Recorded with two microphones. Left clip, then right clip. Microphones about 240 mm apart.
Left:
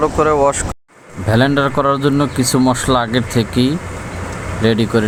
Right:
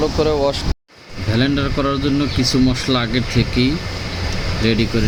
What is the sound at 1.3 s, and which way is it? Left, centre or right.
Speech, centre.